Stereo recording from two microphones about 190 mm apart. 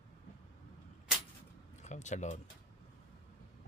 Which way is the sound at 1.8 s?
40° left (ahead or behind).